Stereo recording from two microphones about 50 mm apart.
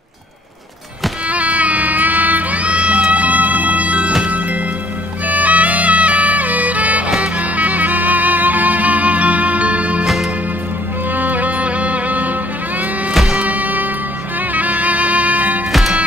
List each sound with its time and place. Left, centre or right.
1.3 s a sound: right
5.2 s music: right
11.1 s music: right
13.1 s music: centre
13.5 s music: right
15.7 s music: centre